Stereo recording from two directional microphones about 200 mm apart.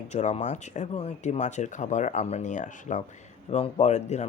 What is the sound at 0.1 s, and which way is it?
Speech, 35° left (ahead or behind).